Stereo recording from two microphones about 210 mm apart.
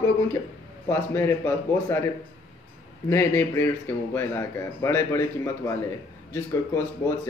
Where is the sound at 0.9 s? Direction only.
10° left (ahead or behind).